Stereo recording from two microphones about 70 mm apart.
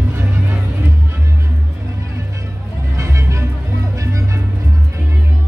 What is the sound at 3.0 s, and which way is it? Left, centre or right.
Music, right.